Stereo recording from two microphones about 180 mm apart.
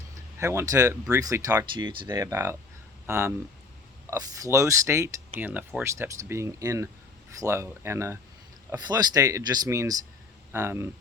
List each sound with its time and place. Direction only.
0.3 s speech: 15° right (ahead or behind)